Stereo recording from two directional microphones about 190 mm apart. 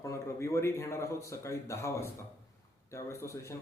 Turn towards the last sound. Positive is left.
turn(degrees=15)  # may be behind; listen again after turning